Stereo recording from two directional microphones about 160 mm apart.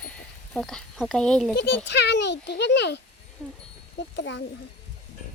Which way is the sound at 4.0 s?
90° left.